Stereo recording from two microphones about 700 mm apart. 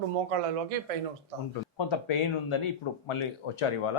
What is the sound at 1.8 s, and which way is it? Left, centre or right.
Speech, left.